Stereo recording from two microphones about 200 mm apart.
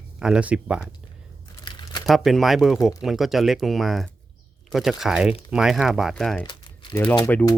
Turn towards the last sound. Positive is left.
turn(degrees=15)  # may be behind; listen again after turning